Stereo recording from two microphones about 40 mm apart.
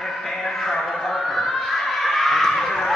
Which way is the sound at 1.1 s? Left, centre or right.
Centre.